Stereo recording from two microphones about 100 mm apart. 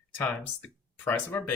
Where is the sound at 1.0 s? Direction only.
20° left (ahead or behind).